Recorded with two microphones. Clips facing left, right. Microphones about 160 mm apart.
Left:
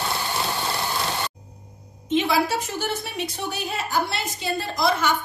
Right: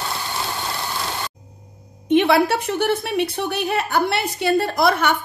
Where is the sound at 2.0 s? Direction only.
65° right (ahead or behind).